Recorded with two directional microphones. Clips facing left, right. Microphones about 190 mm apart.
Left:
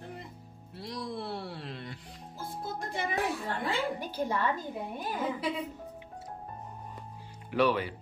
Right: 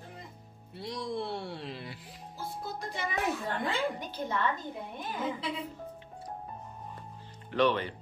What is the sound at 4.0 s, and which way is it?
Speech, 10° left (ahead or behind).